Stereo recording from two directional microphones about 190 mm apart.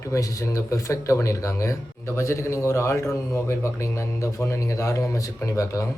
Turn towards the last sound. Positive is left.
turn(degrees=15)  # may be behind; listen again after turning